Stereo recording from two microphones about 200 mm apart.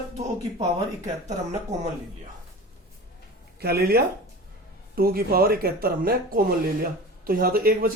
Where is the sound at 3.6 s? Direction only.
50° right (ahead or behind).